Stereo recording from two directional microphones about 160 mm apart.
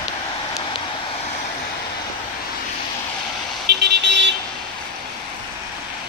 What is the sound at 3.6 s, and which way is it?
Vehicle, 90° right.